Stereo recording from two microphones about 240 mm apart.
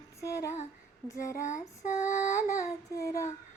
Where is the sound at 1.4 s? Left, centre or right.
Left.